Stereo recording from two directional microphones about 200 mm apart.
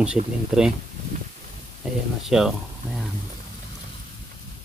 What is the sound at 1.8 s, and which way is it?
Speech, centre (ahead or behind).